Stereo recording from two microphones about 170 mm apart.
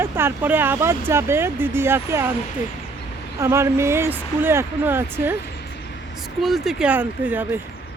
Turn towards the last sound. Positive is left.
turn(degrees=-10)  # may be behind; listen again after turning